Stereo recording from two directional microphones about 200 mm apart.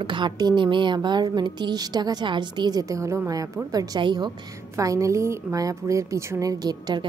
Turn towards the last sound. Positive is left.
turn(degrees=-20)  # may be behind; listen again after turning